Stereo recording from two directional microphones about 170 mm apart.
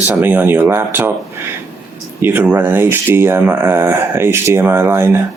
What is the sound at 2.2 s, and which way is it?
Speech, 10° right (ahead or behind).